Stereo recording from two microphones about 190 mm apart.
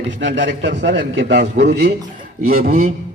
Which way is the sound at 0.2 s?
70° right (ahead or behind).